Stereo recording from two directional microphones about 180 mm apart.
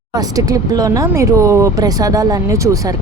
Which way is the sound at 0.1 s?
20° right (ahead or behind).